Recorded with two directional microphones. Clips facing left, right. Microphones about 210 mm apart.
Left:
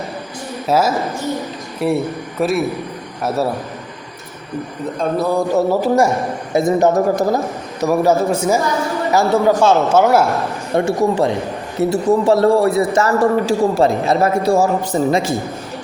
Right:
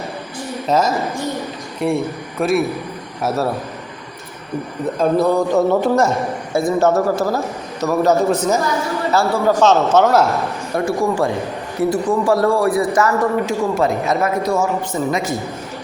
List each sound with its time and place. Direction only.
0.7 s a man's voice: 5° left (ahead or behind)
4.9 s a man's voice: centre (ahead or behind)
6.5 s a man's voice: 20° left (ahead or behind)
10.8 s a man's voice: 25° left (ahead or behind)